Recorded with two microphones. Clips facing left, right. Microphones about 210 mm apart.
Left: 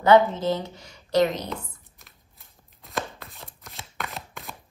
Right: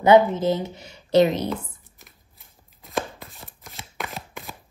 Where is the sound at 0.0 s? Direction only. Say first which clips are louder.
Right 2 dB; 15° right (ahead or behind).